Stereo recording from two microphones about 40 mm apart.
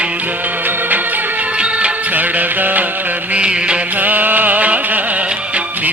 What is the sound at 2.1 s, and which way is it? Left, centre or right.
Music, right.